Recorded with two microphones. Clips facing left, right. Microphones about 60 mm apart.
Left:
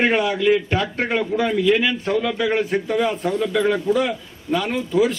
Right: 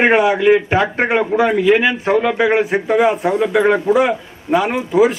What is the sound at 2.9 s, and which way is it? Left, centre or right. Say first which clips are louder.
A man's voice: right 9 dB; right.